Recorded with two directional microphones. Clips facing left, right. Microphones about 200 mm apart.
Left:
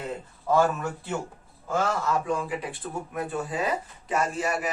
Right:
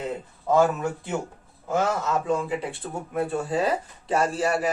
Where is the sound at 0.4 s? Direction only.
20° right (ahead or behind).